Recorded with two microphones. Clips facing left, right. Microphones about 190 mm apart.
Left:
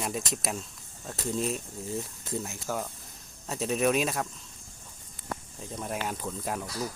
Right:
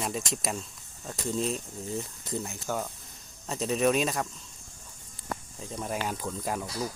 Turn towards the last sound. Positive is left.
turn(degrees=0)  # may be behind; listen again after turning